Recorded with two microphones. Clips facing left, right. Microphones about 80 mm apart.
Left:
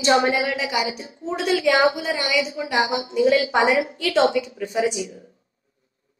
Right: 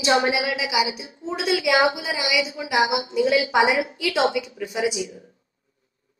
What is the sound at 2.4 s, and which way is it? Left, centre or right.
Speech, left.